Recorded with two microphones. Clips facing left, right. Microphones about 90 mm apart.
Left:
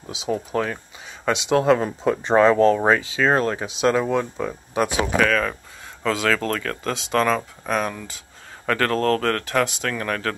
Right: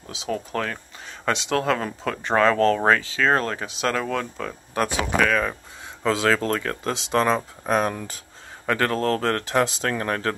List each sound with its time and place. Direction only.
0.0 s speech: 15° left (ahead or behind); by 5.3 s centre (ahead or behind)
5.3 s speech: 10° right (ahead or behind)
6.0 s speech: 25° right (ahead or behind)
8.6 s speech: 15° right (ahead or behind)